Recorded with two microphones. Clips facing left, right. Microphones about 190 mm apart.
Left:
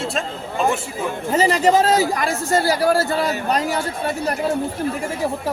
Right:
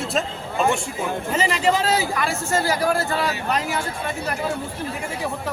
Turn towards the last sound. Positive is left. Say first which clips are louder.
# left 4 dB
turn(degrees=40)  # may be behind; listen again after turning